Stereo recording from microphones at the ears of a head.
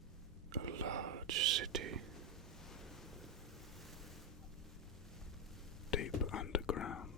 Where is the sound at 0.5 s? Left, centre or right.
Right.